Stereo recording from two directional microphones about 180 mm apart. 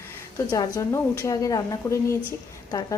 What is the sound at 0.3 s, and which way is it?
A woman's voice, 20° left (ahead or behind).